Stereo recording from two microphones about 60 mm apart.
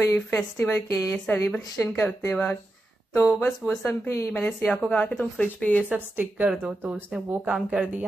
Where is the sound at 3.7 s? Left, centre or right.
Centre.